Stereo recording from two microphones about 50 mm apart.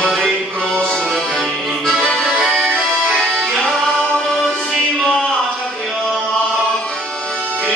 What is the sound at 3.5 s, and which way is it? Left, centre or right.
Music, centre.